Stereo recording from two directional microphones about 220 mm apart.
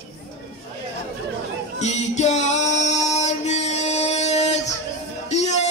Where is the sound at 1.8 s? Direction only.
30° left (ahead or behind).